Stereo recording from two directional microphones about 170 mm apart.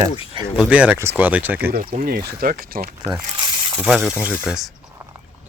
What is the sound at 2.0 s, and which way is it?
Speech, 60° right (ahead or behind).